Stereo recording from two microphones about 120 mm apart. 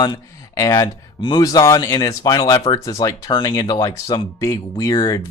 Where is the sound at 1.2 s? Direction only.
40° left (ahead or behind).